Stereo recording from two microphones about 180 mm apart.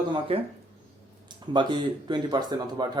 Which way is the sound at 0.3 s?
30° right (ahead or behind).